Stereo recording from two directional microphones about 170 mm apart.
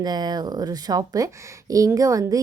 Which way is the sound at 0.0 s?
25° right (ahead or behind).